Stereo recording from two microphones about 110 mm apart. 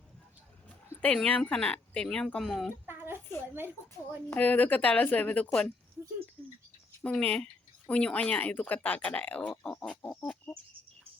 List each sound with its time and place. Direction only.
1.0 s speech: 10° left (ahead or behind)
2.8 s a sound: 20° right (ahead or behind)
4.4 s speech: 15° left (ahead or behind)
7.0 s speech: 10° left (ahead or behind)
10.2 s chicken: 15° left (ahead or behind)